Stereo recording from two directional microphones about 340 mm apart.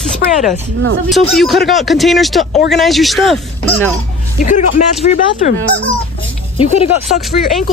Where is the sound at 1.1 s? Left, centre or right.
Centre.